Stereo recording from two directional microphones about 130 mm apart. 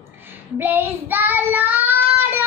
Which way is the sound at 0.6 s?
15° right (ahead or behind).